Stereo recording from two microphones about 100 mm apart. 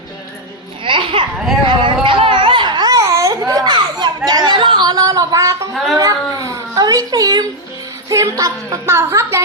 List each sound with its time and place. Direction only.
0.9 s a sound: 60° right (ahead or behind); by 5.6 s 35° right (ahead or behind)
5.7 s speech: centre (ahead or behind)
6.0 s a woman's voice: 35° right (ahead or behind)